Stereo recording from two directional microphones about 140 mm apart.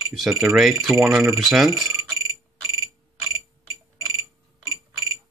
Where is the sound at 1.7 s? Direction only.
25° right (ahead or behind).